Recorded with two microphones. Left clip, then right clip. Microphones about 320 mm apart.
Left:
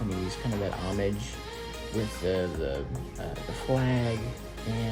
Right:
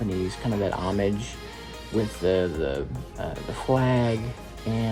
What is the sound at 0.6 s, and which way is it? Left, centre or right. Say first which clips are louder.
Speech: right 7 dB; right.